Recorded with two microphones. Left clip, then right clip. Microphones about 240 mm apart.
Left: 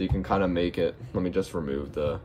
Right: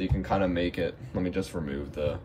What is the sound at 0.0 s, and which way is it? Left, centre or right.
Speech, left.